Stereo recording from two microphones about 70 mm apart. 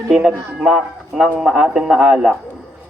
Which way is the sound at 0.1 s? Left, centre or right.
Centre.